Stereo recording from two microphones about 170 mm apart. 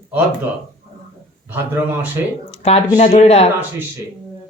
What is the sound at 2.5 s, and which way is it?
Speech, 40° left (ahead or behind).